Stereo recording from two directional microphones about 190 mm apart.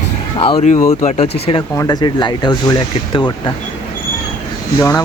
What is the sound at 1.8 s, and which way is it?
Speech, 20° left (ahead or behind).